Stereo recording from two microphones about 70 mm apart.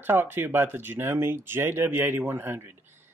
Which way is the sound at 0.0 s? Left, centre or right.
Right.